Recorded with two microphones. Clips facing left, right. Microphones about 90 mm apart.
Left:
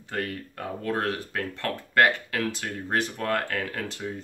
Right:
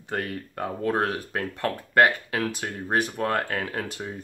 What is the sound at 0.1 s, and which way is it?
Speech, 20° right (ahead or behind).